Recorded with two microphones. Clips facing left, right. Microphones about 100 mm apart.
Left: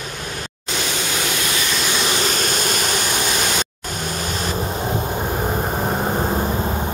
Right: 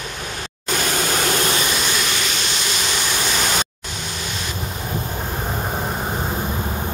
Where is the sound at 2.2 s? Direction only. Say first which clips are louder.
Left 4 dB; 45° left (ahead or behind).